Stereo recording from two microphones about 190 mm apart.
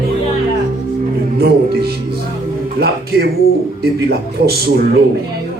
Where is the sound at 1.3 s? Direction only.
55° right (ahead or behind).